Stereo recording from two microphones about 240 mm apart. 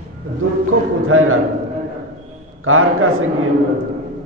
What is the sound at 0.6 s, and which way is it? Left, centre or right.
Speech, right.